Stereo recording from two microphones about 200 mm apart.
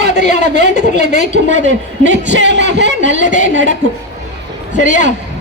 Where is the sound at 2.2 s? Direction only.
60° right (ahead or behind).